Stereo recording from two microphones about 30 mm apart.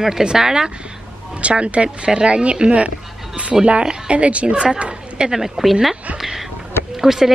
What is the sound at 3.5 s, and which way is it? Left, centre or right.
Speech, centre.